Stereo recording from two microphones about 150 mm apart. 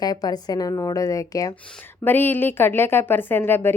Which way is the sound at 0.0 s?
25° left (ahead or behind).